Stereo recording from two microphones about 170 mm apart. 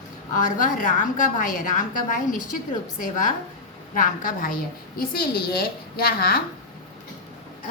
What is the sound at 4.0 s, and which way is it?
A woman's voice, 55° left (ahead or behind).